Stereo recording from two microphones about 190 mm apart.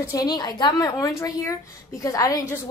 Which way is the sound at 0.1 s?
20° left (ahead or behind).